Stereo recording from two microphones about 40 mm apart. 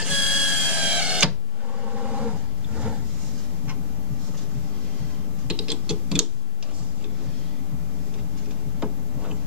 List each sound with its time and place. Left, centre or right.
0.0 s printer: centre
0.5 s printer: right
1.9 s vehicle: right
5.5 s typing: right
8.7 s a sound: centre